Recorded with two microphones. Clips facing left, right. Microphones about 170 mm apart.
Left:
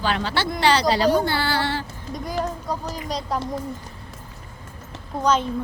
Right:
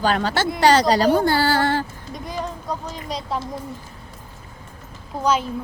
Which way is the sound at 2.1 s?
Centre (ahead or behind).